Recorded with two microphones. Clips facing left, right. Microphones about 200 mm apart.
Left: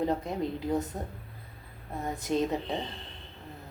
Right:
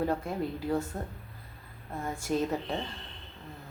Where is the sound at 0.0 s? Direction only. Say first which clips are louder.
Left 1 dB; 20° left (ahead or behind).